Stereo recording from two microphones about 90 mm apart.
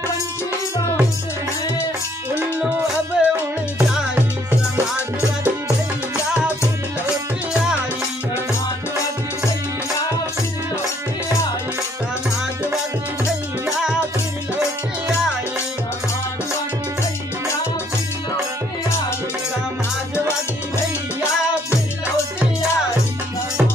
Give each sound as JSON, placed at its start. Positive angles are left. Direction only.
{"t": 3.2, "sound": "music", "side_deg": -5}
{"t": 13.7, "sound": "music", "side_deg": -10}